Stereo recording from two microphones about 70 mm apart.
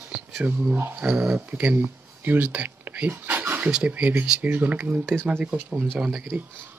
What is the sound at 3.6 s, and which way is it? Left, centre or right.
Speech, centre.